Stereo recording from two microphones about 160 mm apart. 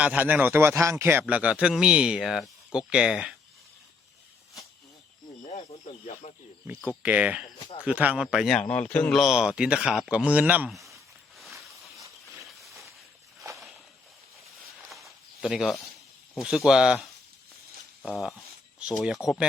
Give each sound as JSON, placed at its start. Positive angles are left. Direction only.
{"t": 0.0, "sound": "a man's voice", "side_deg": -10}
{"t": 5.4, "sound": "snake", "side_deg": 50}
{"t": 6.7, "sound": "a man's voice", "side_deg": -10}
{"t": 10.7, "sound": "speech", "side_deg": 0}
{"t": 12.5, "sound": "a sound", "side_deg": 0}
{"t": 13.5, "sound": "walk", "side_deg": -20}
{"t": 14.8, "sound": "a sound", "side_deg": 0}
{"t": 16.4, "sound": "speech", "side_deg": -5}
{"t": 18.1, "sound": "speech", "side_deg": 0}